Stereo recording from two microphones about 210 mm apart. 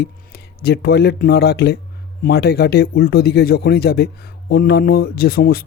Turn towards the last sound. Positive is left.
turn(degrees=45)  # may be behind; listen again after turning